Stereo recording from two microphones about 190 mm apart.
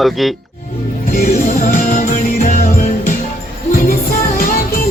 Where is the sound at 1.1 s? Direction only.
50° left (ahead or behind).